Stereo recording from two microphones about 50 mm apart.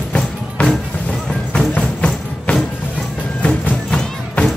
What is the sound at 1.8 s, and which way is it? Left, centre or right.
Music, left.